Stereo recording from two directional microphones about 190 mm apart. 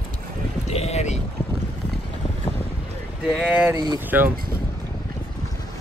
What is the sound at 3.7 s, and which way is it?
Speech, 15° right (ahead or behind).